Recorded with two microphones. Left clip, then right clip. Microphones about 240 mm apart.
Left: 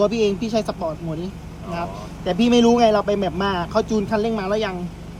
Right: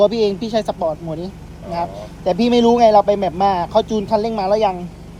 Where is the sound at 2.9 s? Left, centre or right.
Centre.